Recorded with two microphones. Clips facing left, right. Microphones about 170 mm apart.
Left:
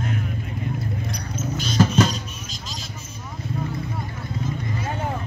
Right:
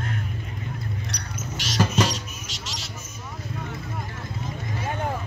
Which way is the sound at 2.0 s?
80° right.